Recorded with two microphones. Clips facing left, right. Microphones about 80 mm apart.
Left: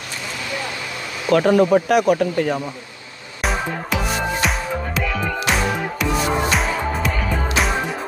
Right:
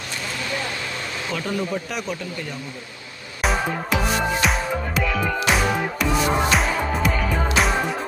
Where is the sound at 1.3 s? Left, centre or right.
Left.